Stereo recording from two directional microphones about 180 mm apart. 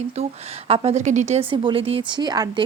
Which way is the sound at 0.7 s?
35° right (ahead or behind).